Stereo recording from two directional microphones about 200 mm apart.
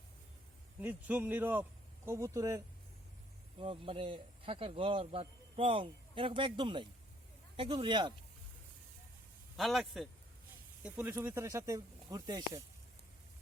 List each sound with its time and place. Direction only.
0.8 s speech: 10° right (ahead or behind)
3.6 s speech: 25° right (ahead or behind)
9.6 s a man's voice: centre (ahead or behind)
10.8 s speech: 10° right (ahead or behind)